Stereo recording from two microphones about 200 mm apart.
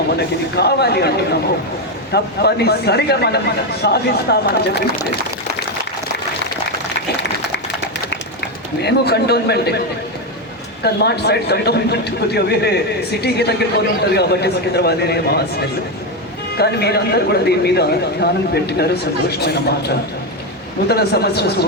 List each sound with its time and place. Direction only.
0.2 s speech: 55° left (ahead or behind)
8.8 s speech: 55° left (ahead or behind)
10.8 s speech: 55° left (ahead or behind)